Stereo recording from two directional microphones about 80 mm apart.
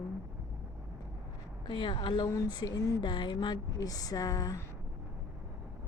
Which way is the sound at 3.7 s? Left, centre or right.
Left.